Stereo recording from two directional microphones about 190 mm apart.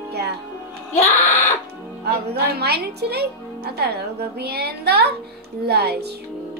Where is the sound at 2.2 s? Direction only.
60° right (ahead or behind).